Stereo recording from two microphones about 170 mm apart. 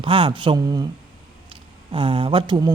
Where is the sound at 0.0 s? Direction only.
30° right (ahead or behind).